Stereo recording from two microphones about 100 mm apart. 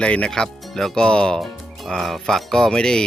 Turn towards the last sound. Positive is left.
turn(degrees=10)  # may be behind; listen again after turning